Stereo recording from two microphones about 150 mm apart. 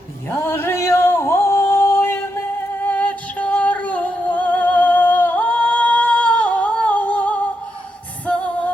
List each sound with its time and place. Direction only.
0.3 s singing: 15° left (ahead or behind)
2.8 s music: 10° left (ahead or behind)